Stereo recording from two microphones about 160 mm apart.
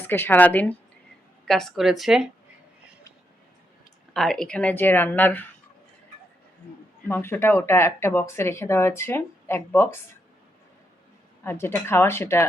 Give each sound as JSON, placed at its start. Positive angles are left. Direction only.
{"t": 0.0, "sound": "a woman's voice", "side_deg": 15}
{"t": 4.1, "sound": "speech", "side_deg": 5}
{"t": 7.1, "sound": "speech", "side_deg": 15}
{"t": 11.4, "sound": "speech", "side_deg": 15}